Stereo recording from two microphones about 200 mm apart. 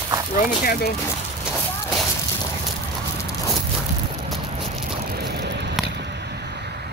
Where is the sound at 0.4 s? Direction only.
45° left (ahead or behind).